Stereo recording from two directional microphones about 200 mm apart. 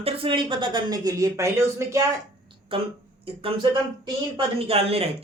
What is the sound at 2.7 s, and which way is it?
Speech, 25° right (ahead or behind).